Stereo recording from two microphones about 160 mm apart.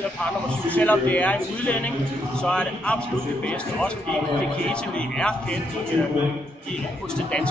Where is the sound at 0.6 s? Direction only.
10° left (ahead or behind).